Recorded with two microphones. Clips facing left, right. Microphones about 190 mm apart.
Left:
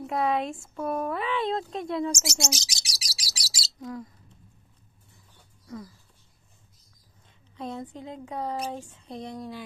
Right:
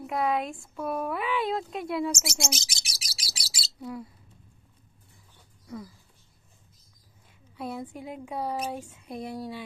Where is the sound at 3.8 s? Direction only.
10° right (ahead or behind).